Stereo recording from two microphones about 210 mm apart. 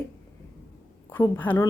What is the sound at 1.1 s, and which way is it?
Speech, 10° left (ahead or behind).